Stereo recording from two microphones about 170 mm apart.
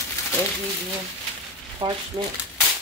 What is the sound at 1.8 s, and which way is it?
Speech, 25° right (ahead or behind).